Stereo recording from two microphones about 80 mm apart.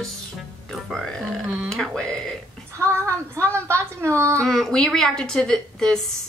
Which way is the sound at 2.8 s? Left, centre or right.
Right.